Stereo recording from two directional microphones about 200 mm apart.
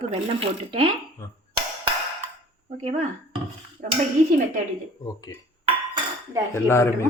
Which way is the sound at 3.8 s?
40° right (ahead or behind).